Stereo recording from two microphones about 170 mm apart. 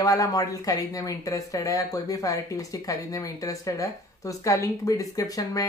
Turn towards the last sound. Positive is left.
turn(degrees=20)  # may be behind; listen again after turning